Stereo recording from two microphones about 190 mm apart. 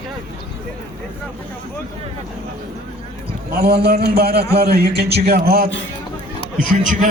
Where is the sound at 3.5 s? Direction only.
55° right (ahead or behind).